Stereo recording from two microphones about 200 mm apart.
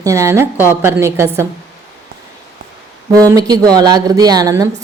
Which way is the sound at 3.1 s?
15° right (ahead or behind).